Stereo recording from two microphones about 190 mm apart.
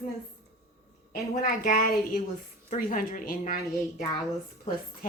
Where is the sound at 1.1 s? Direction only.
45° left (ahead or behind).